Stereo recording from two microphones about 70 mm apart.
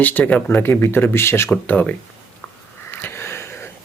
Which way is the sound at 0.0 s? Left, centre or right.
Left.